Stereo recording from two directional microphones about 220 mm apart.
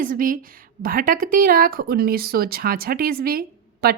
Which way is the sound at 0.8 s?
40° right (ahead or behind).